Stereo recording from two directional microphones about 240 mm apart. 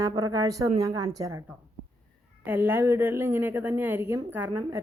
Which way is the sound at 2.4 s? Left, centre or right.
Centre.